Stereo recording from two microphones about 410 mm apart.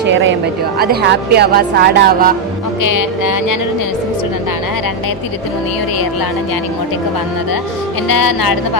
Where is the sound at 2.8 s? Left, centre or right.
Left.